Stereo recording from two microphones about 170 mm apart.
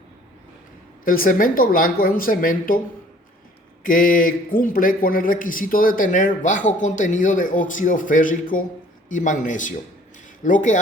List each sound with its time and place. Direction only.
1.0 s speech: 55° left (ahead or behind)
3.8 s a man's voice: 55° left (ahead or behind)